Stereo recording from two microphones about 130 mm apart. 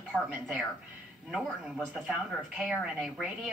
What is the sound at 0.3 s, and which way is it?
Speech, 10° right (ahead or behind).